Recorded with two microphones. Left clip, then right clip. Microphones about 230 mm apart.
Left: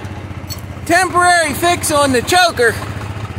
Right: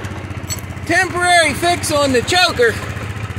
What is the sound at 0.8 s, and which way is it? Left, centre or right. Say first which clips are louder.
Speech: left 3 dB; centre.